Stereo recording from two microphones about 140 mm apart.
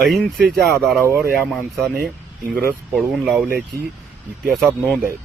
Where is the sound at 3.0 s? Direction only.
Centre (ahead or behind).